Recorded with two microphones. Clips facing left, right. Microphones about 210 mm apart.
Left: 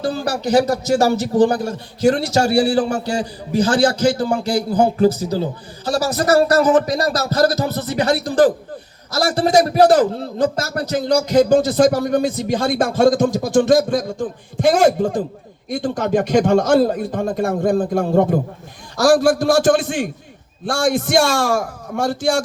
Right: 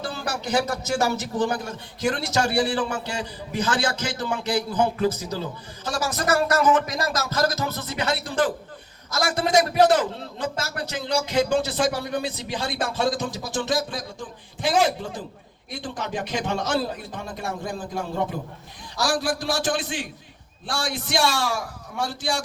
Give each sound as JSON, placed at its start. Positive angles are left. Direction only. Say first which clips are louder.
{"t": 0.1, "sound": "a man's voice", "louder": "left 8 dB", "side_deg": 35}